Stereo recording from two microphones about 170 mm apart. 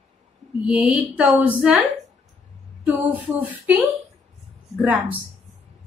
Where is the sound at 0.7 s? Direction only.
5° right (ahead or behind).